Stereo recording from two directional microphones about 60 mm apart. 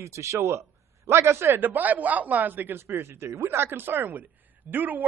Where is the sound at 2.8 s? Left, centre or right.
Right.